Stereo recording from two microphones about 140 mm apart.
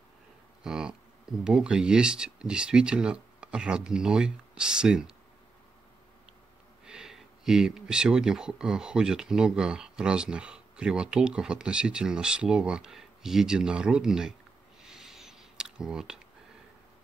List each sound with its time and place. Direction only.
0.7 s speech: 5° right (ahead or behind)
6.9 s speech: 5° right (ahead or behind)
14.8 s a sound: 5° right (ahead or behind)